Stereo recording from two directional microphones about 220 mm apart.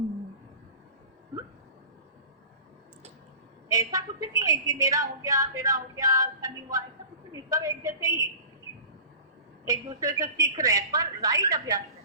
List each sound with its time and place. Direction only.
3.7 s a woman's voice: 15° right (ahead or behind)
9.6 s a woman's voice: 15° right (ahead or behind)